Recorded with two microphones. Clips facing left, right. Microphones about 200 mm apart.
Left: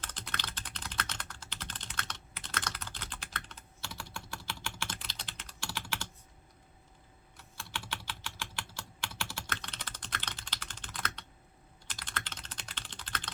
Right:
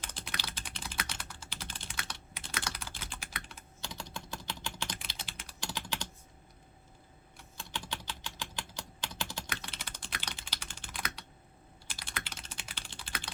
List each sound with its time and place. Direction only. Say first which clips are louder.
0.0 s typing: even; 10° right (ahead or behind)
7.5 s typing: right 1 dB; 20° right (ahead or behind)